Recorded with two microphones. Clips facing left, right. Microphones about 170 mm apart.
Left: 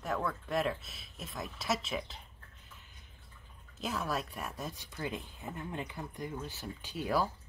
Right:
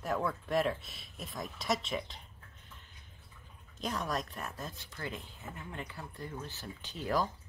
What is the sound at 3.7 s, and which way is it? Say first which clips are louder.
Speech: even; 5° left (ahead or behind).